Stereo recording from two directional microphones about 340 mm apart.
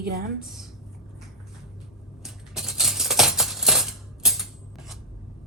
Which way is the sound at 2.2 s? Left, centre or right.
Centre.